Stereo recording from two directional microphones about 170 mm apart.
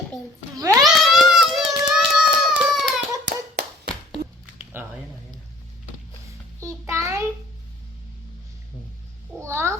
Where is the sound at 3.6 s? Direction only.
70° right (ahead or behind).